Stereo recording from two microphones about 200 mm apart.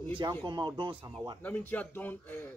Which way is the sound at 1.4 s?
10° left (ahead or behind).